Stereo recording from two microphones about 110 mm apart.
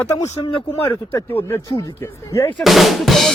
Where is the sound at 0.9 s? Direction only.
20° left (ahead or behind).